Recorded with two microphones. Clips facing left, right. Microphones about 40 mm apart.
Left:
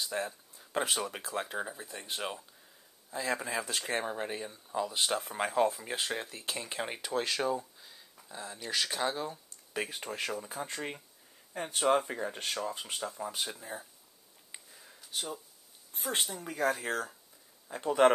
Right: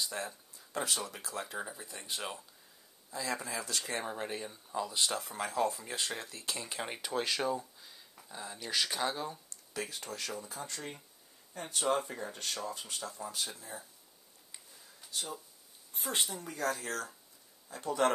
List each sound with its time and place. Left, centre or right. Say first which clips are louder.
0.1 s speech: left 4 dB; centre
1.7 s speech: left 3 dB; centre
3.1 s speech: left 4 dB; left
4.0 s speech: left 2 dB; centre
6.8 s speech: left 2 dB; centre
9.8 s speech: left 4 dB; left
14.5 s a sound: left 4 dB; left
16.2 s speech: right 1 dB; centre
16.4 s speech: left 4 dB; centre
17.6 s speech: left 6 dB; left